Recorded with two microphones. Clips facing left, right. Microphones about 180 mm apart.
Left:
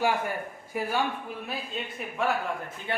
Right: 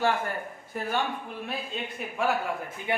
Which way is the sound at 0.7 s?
10° left (ahead or behind).